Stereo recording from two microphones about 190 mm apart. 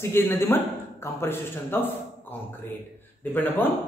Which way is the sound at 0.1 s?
10° left (ahead or behind).